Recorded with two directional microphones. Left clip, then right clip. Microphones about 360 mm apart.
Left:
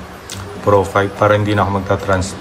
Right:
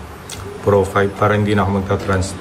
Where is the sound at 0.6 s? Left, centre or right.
Centre.